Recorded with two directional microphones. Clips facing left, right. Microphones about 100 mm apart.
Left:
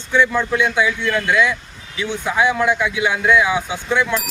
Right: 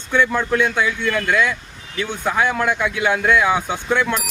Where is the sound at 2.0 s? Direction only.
50° right (ahead or behind).